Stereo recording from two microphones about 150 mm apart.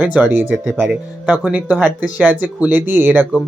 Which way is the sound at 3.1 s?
5° left (ahead or behind).